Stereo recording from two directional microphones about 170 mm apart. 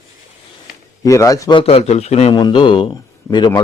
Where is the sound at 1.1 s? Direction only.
20° left (ahead or behind); by 2.3 s 40° left (ahead or behind).